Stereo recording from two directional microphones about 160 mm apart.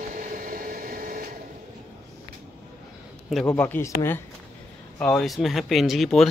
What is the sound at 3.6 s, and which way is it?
Speech, 15° left (ahead or behind).